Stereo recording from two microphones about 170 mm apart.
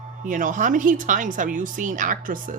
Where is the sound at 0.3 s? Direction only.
50° right (ahead or behind).